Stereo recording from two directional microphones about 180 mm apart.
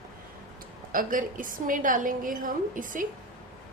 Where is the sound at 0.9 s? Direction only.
50° right (ahead or behind).